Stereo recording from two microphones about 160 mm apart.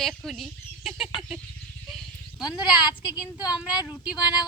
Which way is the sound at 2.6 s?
25° left (ahead or behind).